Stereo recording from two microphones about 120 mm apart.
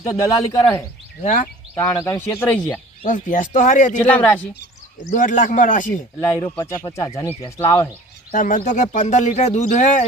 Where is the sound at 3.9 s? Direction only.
15° left (ahead or behind).